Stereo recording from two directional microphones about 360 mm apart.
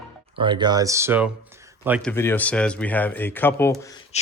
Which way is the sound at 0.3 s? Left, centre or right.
Centre.